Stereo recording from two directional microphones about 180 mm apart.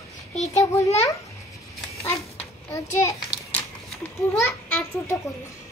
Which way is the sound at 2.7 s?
15° left (ahead or behind).